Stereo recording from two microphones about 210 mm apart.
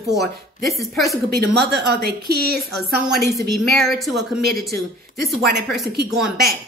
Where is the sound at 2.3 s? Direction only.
50° right (ahead or behind).